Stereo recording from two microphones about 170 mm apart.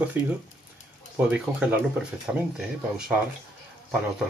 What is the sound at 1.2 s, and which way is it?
Speech, 5° right (ahead or behind).